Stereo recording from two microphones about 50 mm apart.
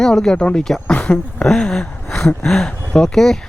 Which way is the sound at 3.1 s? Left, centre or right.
Centre.